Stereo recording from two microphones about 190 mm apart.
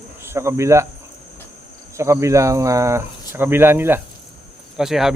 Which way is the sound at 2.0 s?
15° right (ahead or behind).